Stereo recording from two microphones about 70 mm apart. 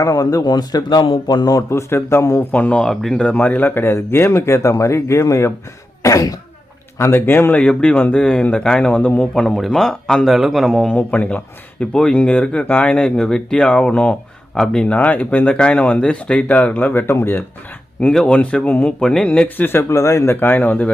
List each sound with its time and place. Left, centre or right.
0.0 s speech: left
2.0 s speech: left
2.4 s speech: left
2.8 s a man's voice: centre
3.2 s speech: centre; by 6.3 s left
7.0 s speech: left
7.5 s speech: centre
10.2 s a man's voice: centre
10.9 s speech: left
18.1 s a man's voice: centre
18.3 s speech: centre
19.9 s speech: left